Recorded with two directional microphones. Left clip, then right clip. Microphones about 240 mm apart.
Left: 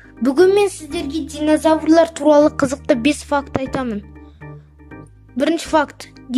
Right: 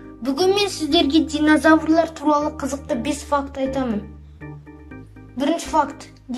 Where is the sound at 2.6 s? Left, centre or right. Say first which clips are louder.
Left 8 dB; left.